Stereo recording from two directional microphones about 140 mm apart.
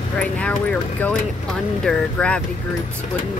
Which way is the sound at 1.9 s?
5° left (ahead or behind).